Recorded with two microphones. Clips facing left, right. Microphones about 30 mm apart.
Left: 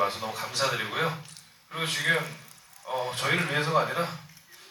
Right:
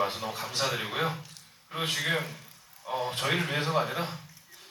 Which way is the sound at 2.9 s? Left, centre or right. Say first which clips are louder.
Left 1 dB; centre.